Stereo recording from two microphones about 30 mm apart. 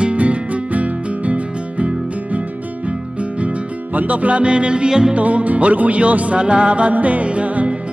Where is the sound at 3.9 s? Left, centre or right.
Right.